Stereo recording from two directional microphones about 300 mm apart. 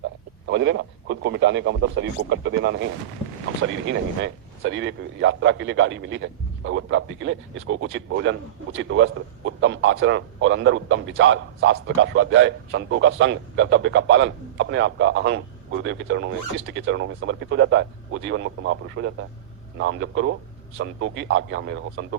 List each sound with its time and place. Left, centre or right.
0.4 s a man's voice: right